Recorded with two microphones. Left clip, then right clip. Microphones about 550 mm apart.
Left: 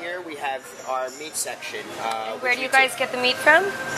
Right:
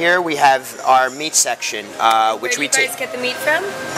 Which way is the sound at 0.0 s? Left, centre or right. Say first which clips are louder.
Right 16 dB; right.